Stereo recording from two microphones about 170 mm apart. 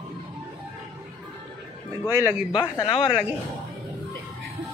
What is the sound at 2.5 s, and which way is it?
Speech, 25° left (ahead or behind).